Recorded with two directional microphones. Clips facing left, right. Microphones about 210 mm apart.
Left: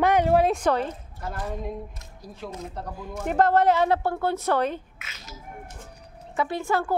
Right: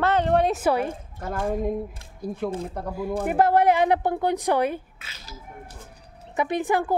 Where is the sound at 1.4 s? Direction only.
50° right (ahead or behind).